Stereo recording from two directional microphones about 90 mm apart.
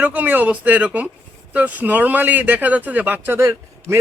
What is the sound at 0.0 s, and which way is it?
Speech, 20° right (ahead or behind).